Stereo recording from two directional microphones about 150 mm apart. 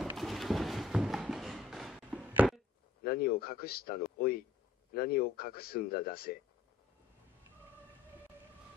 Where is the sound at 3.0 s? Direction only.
90° left.